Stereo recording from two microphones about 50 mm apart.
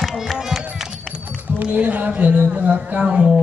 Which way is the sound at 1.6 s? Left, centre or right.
Right.